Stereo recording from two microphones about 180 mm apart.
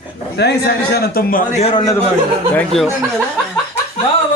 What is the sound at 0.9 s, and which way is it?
Speech, 50° left (ahead or behind).